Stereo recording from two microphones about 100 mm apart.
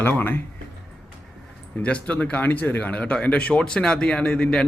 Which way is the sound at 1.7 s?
15° left (ahead or behind).